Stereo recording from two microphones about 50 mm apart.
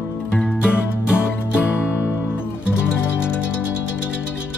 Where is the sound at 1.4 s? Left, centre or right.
Left.